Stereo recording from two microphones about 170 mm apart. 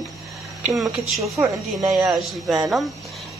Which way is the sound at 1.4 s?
10° right (ahead or behind).